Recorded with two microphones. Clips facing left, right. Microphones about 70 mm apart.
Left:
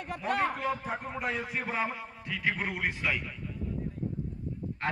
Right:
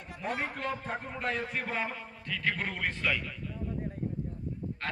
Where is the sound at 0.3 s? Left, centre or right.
Left.